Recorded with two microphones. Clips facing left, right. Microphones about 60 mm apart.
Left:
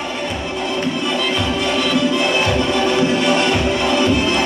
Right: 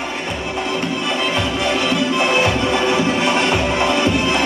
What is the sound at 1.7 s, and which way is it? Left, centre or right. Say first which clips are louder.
Music: left 2 dB; right.